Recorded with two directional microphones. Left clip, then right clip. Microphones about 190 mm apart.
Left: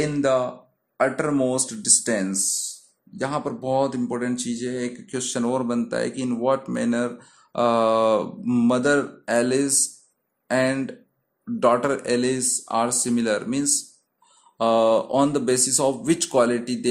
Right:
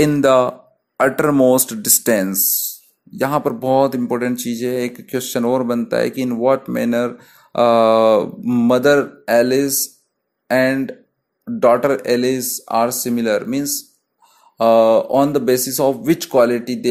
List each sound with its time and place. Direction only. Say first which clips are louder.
0.0 s speech: right 8 dB; 40° right (ahead or behind); by 16.8 s 15° right (ahead or behind)